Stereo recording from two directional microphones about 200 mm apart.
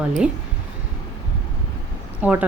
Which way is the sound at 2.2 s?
5° right (ahead or behind).